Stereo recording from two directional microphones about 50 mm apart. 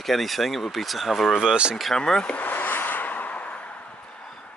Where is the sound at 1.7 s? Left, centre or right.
Centre.